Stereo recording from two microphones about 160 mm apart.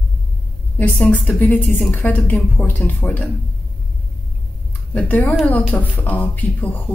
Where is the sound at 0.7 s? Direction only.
10° left (ahead or behind).